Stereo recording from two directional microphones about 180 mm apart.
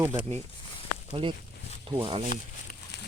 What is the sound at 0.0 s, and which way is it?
Speech, 15° right (ahead or behind).